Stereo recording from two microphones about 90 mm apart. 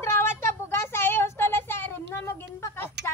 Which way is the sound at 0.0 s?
30° left (ahead or behind).